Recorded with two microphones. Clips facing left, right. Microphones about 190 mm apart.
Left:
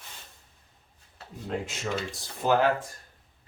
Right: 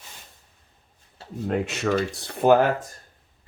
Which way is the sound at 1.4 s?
65° right (ahead or behind).